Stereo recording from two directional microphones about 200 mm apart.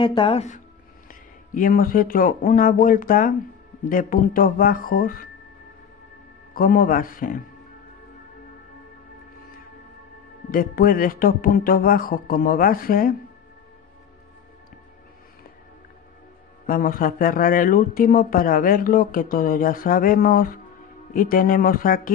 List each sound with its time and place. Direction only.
0.0 s speech: 25° left (ahead or behind)
1.0 s speech: 45° left (ahead or behind)
6.5 s speech: 45° left (ahead or behind)
10.5 s speech: 45° left (ahead or behind)
16.6 s speech: 45° left (ahead or behind)